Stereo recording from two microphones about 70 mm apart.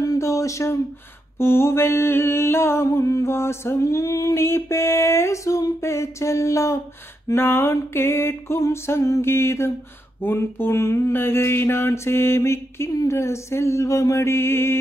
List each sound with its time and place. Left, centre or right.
0.0 s a sound: left
1.4 s mantra: left
2.9 s music: left
4.4 s mantra: left
7.3 s mantra: left